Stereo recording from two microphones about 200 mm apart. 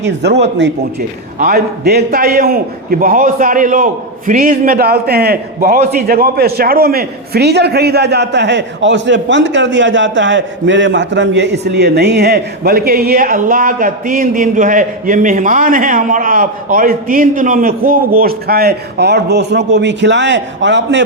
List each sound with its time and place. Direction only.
0.0 s speech: 55° right (ahead or behind)
1.4 s a man's voice: 50° right (ahead or behind)